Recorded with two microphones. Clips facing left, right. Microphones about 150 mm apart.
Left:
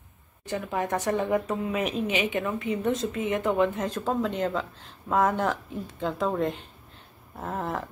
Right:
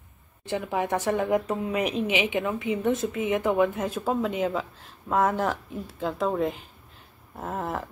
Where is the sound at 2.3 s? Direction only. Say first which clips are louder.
Right 1 dB; 15° right (ahead or behind).